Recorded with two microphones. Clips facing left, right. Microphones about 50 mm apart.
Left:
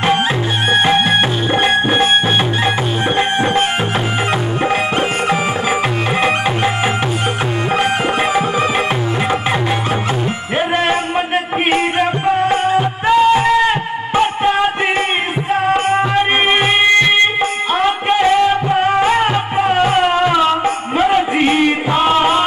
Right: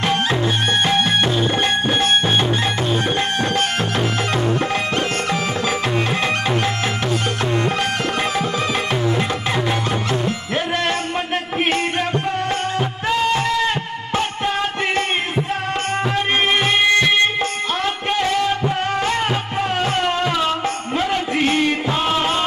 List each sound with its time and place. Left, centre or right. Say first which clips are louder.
0.7 s music: left 7 dB; centre
3.2 s music: left 5 dB; left
7.7 s music: left 5 dB; left
10.8 s music: left 5 dB; left